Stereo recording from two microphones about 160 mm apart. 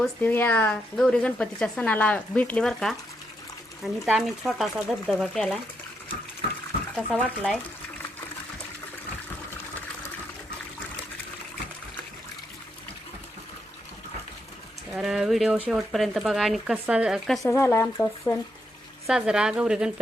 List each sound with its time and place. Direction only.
0.0 s speech: 10° left (ahead or behind)
7.3 s speech: 5° left (ahead or behind)
14.9 s speech: 5° right (ahead or behind)
17.4 s speech: 15° left (ahead or behind)
19.0 s speech: 5° right (ahead or behind)